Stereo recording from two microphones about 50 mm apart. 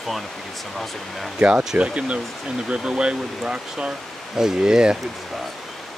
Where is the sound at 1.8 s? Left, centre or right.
Right.